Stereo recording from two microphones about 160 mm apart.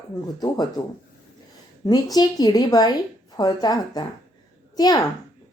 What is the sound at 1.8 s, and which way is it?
A woman's voice, 25° left (ahead or behind).